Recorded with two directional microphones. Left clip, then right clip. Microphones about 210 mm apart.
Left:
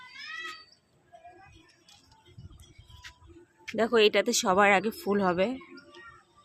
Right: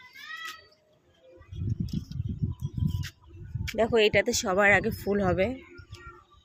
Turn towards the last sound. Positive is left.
turn(degrees=5)  # may be behind; listen again after turning